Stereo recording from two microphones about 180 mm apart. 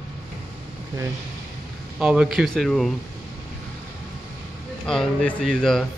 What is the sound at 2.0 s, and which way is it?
Speech, 5° right (ahead or behind).